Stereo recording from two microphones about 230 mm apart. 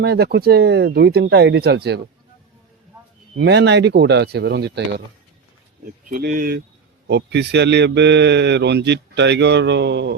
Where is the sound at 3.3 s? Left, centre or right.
Right.